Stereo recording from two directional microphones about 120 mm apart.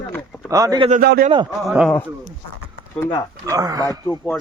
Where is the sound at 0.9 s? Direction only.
90° right.